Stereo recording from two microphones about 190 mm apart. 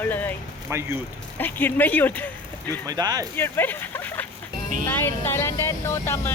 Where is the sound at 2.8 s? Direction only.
20° right (ahead or behind).